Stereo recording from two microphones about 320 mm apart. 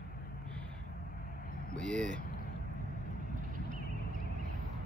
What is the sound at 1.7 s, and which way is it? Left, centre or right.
Speech, centre.